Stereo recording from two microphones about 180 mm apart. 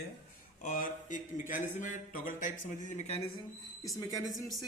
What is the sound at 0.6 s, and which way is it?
Speech, 45° left (ahead or behind).